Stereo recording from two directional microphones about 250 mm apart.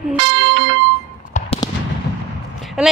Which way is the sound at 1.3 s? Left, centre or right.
Left.